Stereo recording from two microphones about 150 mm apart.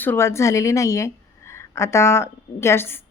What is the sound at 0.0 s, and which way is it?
A woman's voice, 15° left (ahead or behind).